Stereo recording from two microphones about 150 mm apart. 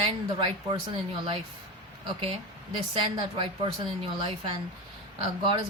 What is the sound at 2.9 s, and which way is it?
A woman's voice, 35° right (ahead or behind).